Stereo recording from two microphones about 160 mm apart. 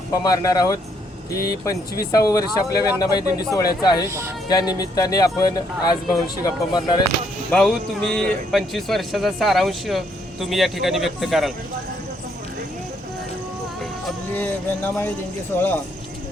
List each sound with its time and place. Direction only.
0.1 s speech: 20° left (ahead or behind)
7.5 s a man's voice: 5° left (ahead or behind)
14.3 s speech: 10° left (ahead or behind)